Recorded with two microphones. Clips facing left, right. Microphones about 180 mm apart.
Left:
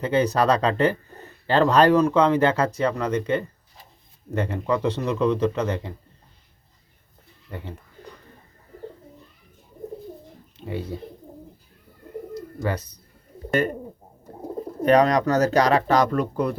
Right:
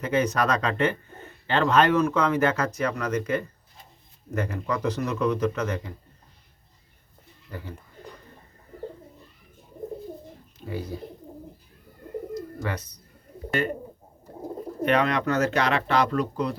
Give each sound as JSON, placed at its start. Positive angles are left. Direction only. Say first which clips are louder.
{"t": 0.0, "sound": "a man's voice", "louder": "left 3 dB", "side_deg": 30}
{"t": 7.5, "sound": "a man's voice", "louder": "left 2 dB", "side_deg": 25}
{"t": 10.6, "sound": "speech", "louder": "left 2 dB", "side_deg": 25}
{"t": 12.3, "sound": "bird", "louder": "left 6 dB", "side_deg": 35}
{"t": 13.6, "sound": "speech", "louder": "left 3 dB", "side_deg": 45}
{"t": 14.8, "sound": "speech", "louder": "left 6 dB", "side_deg": 40}